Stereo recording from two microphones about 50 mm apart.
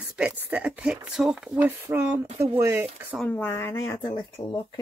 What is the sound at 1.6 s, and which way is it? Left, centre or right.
Speech, right.